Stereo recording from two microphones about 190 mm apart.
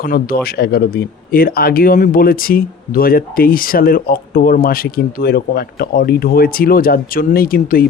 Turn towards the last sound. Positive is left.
turn(degrees=50)  # may be behind; listen again after turning